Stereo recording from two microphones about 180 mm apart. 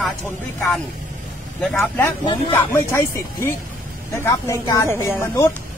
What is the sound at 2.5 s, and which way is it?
Speech, 15° left (ahead or behind).